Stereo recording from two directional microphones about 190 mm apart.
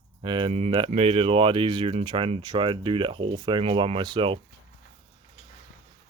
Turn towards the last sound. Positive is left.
turn(degrees=-25)  # may be behind; listen again after turning